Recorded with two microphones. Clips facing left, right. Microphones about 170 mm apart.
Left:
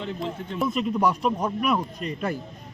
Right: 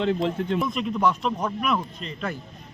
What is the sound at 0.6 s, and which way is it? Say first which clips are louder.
Speech: left 4 dB; 5° left (ahead or behind).